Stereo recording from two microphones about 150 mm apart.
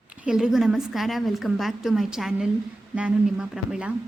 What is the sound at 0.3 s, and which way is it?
A woman's voice, 5° right (ahead or behind).